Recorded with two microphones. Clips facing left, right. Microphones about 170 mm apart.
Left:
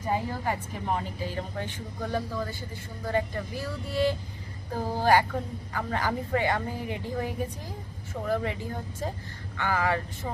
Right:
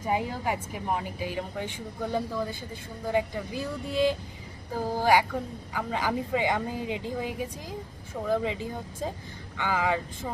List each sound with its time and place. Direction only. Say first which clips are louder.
0.1 s a woman's voice: right 1 dB; 10° right (ahead or behind)